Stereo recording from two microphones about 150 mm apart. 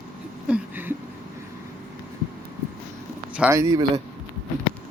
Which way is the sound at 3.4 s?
15° right (ahead or behind).